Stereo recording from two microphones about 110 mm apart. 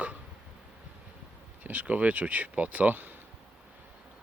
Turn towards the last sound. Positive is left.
turn(degrees=-15)  # may be behind; listen again after turning